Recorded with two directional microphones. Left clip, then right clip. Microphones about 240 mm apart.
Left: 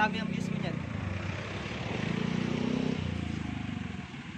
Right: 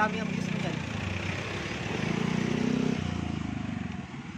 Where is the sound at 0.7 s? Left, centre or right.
Right.